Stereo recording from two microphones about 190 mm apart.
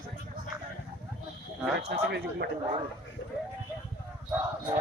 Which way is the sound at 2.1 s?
60° right (ahead or behind).